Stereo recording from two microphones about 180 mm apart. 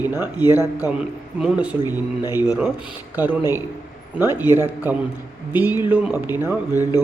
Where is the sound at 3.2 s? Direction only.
10° right (ahead or behind).